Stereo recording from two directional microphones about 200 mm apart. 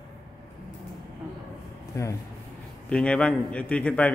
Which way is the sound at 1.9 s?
15° left (ahead or behind).